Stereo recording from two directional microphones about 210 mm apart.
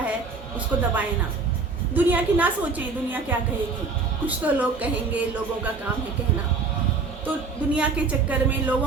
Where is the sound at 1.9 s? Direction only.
10° right (ahead or behind).